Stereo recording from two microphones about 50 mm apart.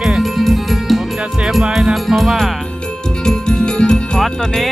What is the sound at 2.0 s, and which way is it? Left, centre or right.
Music, centre.